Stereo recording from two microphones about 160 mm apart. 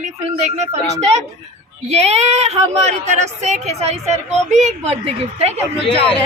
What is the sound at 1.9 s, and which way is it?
Speech, 45° right (ahead or behind).